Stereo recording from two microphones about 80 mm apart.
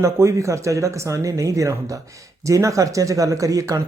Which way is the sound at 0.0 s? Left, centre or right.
Right.